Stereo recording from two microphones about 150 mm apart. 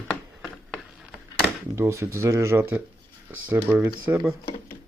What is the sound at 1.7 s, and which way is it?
Speech, 20° right (ahead or behind).